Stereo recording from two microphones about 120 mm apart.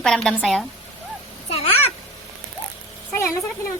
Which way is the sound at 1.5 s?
55° left (ahead or behind).